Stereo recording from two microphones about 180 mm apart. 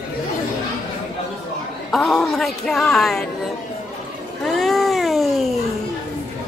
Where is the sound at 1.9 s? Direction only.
Centre (ahead or behind).